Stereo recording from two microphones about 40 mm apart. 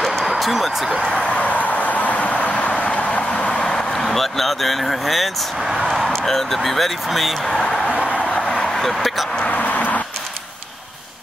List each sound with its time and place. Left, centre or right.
0.2 s speech: centre
1.1 s vehicle: left
3.7 s speech: centre
7.6 s a sound: centre
8.3 s vehicle: centre
8.7 s speech: centre
9.4 s vehicle: left